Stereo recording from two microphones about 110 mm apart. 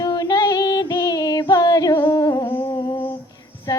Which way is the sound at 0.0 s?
35° left (ahead or behind).